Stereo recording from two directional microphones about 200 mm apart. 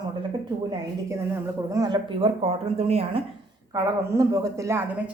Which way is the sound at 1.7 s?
20° right (ahead or behind).